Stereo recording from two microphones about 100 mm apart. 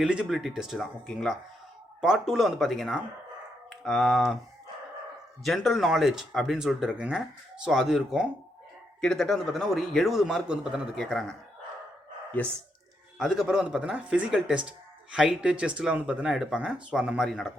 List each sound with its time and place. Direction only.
0.0 s a man's voice: 10° right (ahead or behind)
1.0 s speech: 5° left (ahead or behind)
2.0 s a man's voice: 5° right (ahead or behind)
5.4 s a man's voice: centre (ahead or behind)
9.0 s a man's voice: 5° left (ahead or behind)
11.0 s a man's voice: 5° left (ahead or behind)
12.4 s speech: 15° left (ahead or behind)
13.1 s speech: 5° right (ahead or behind)